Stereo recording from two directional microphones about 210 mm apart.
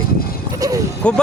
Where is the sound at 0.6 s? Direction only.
15° right (ahead or behind).